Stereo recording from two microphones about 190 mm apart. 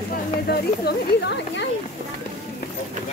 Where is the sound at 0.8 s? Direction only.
60° left (ahead or behind).